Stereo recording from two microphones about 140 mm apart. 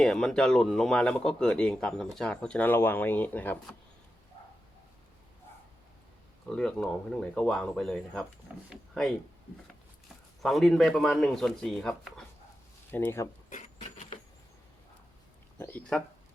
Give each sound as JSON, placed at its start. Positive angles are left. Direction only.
{"t": 0.0, "sound": "speech", "side_deg": 5}
{"t": 6.5, "sound": "speech", "side_deg": 5}
{"t": 10.4, "sound": "speech", "side_deg": 0}
{"t": 12.9, "sound": "speech", "side_deg": 15}
{"t": 13.5, "sound": "a sound", "side_deg": 60}
{"t": 15.5, "sound": "speech", "side_deg": 15}